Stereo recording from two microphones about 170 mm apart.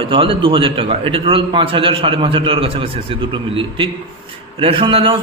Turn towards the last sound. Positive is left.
turn(degrees=-30)  # may be behind; listen again after turning